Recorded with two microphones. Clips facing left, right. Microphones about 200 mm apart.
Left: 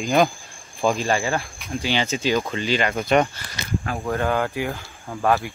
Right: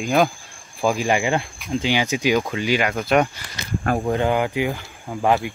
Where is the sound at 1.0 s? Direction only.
15° right (ahead or behind).